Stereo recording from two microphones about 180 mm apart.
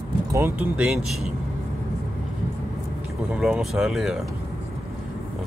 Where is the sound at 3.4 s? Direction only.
5° right (ahead or behind).